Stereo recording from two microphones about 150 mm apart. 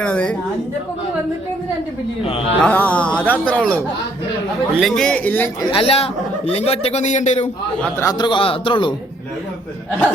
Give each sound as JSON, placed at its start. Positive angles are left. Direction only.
{"t": 0.0, "sound": "speech", "side_deg": 5}
{"t": 2.6, "sound": "speech", "side_deg": 10}
{"t": 5.7, "sound": "a man's voice", "side_deg": 40}
{"t": 8.0, "sound": "a man's voice", "side_deg": 30}